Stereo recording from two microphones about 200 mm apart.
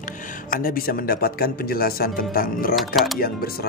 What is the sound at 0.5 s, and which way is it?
Speech, 45° left (ahead or behind).